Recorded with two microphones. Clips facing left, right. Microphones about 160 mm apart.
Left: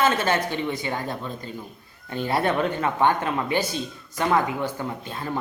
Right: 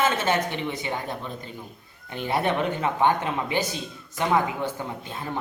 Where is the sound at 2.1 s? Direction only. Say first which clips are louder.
Left 2 dB; 15° right (ahead or behind).